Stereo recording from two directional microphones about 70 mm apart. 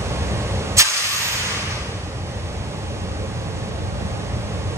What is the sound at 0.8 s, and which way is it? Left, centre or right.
Vehicle, right.